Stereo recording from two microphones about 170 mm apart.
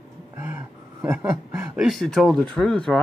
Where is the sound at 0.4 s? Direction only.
15° right (ahead or behind).